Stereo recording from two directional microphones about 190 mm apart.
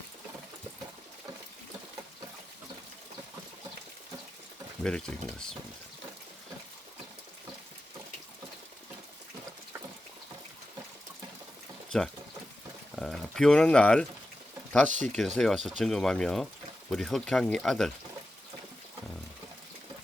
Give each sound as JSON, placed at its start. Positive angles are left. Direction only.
{"t": 4.8, "sound": "speech", "side_deg": 5}
{"t": 13.0, "sound": "speech", "side_deg": 0}
{"t": 14.8, "sound": "speech", "side_deg": -40}
{"t": 15.4, "sound": "speech", "side_deg": 0}